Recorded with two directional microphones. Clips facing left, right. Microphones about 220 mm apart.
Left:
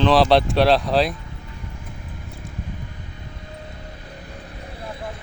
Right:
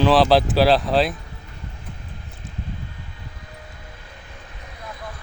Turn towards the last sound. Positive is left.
turn(degrees=30)  # may be behind; listen again after turning